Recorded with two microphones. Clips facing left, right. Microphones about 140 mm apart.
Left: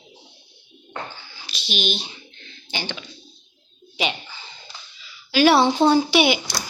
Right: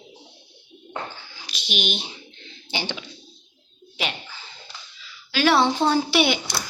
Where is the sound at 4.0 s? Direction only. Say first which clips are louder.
Left 4 dB; centre (ahead or behind).